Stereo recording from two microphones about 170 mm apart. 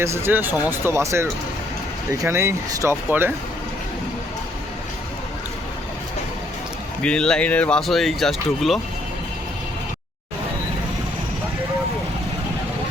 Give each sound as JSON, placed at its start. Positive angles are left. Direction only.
{"t": 0.0, "sound": "speech", "side_deg": -15}
{"t": 7.0, "sound": "speech", "side_deg": 5}